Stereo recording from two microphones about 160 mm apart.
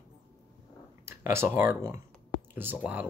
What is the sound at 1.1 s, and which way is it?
Speech, 15° right (ahead or behind).